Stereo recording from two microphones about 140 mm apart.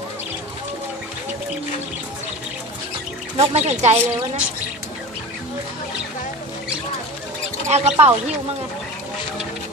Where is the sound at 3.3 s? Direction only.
50° right (ahead or behind).